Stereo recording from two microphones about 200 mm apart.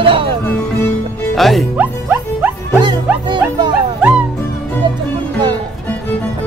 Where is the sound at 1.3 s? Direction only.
Centre (ahead or behind).